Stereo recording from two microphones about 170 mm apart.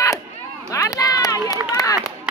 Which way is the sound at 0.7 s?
20° left (ahead or behind).